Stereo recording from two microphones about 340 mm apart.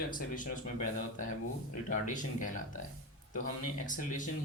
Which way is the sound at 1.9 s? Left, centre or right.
Left.